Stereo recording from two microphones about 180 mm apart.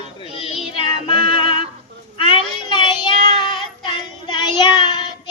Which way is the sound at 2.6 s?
25° left (ahead or behind).